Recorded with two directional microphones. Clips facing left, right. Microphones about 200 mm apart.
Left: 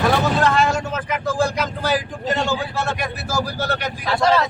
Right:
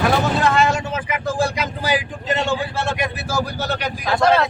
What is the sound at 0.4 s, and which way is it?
Vehicle, centre (ahead or behind).